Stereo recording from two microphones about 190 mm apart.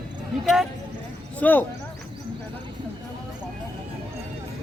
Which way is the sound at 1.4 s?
10° left (ahead or behind).